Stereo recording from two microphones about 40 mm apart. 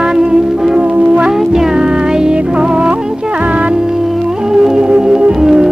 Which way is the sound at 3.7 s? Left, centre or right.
Centre.